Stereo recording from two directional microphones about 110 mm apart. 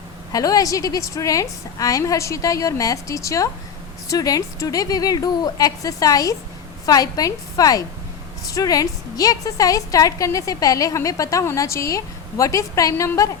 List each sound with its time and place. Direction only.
0.3 s a woman's voice: 35° left (ahead or behind)